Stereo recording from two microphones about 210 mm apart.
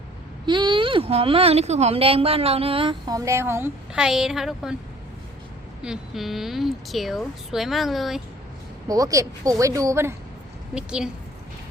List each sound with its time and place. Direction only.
0.4 s speech: 20° right (ahead or behind); by 4.8 s centre (ahead or behind)
5.8 s a woman's voice: centre (ahead or behind)
8.9 s a woman's voice: 15° right (ahead or behind)